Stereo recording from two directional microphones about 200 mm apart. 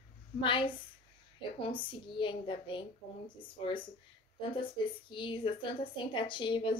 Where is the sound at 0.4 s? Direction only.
25° left (ahead or behind).